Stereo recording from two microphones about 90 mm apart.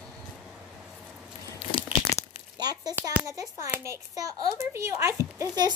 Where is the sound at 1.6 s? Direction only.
70° left (ahead or behind).